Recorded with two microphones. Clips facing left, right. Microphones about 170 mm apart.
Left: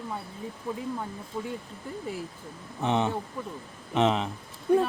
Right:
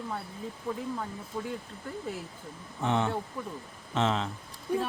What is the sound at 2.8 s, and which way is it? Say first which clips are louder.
A man's voice: left 2 dB; 20° left (ahead or behind).